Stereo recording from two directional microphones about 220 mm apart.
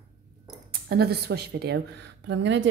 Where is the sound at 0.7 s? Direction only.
45° right (ahead or behind).